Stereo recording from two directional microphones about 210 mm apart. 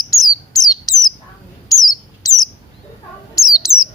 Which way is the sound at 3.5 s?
15° left (ahead or behind).